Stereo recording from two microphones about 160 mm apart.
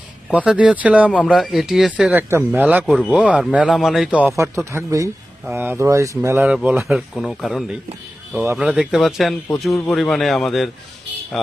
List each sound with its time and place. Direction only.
0.3 s speech: 5° right (ahead or behind)